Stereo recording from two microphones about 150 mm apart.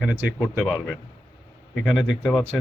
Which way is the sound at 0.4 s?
Centre (ahead or behind).